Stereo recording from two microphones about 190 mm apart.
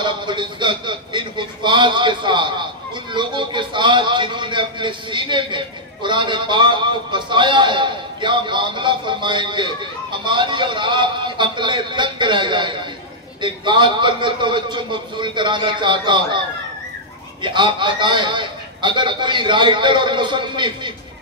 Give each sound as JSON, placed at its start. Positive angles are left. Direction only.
{"t": 0.0, "sound": "a man's voice", "side_deg": -25}
{"t": 17.4, "sound": "a man's voice", "side_deg": -25}